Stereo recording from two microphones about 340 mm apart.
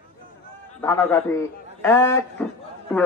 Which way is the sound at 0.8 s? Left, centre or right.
Centre.